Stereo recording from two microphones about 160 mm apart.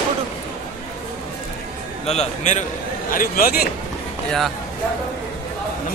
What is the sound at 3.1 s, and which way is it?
Speech, 65° left (ahead or behind).